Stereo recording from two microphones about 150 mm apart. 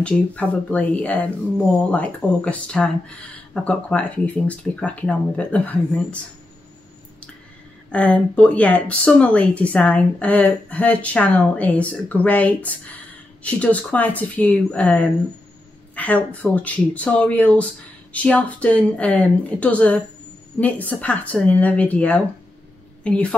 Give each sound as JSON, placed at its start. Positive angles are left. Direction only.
{"t": 0.0, "sound": "speech", "side_deg": 10}
{"t": 7.9, "sound": "speech", "side_deg": 10}